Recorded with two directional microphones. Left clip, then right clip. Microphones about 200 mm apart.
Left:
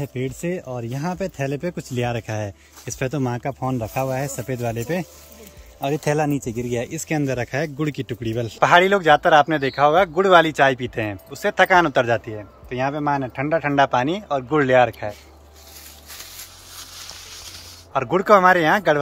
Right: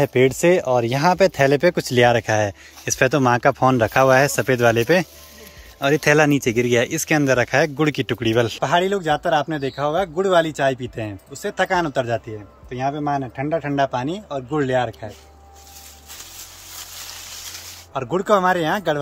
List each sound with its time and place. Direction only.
0.0 s speech: 15° right (ahead or behind)
0.6 s speech: centre (ahead or behind)
3.5 s speech: 45° right (ahead or behind)
4.2 s speech: centre (ahead or behind)
17.9 s speech: 5° left (ahead or behind)